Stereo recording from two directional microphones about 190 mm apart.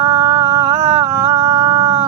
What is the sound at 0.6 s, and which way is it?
Humming, 40° right (ahead or behind).